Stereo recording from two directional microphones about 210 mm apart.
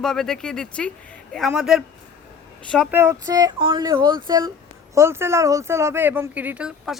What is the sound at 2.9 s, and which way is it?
Speech, 10° right (ahead or behind).